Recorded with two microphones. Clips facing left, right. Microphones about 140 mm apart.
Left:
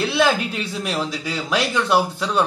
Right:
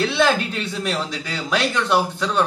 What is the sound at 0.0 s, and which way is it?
A man's voice, 5° left (ahead or behind).